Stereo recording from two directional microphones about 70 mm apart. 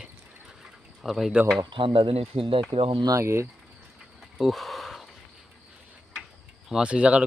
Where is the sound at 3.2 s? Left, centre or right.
Right.